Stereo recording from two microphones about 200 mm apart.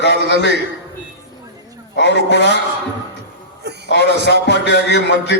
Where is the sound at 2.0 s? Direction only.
60° left (ahead or behind).